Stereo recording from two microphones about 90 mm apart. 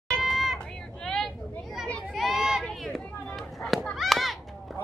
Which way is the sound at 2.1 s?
Centre (ahead or behind).